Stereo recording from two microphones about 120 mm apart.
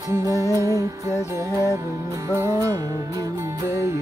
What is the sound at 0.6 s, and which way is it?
Music, 25° right (ahead or behind).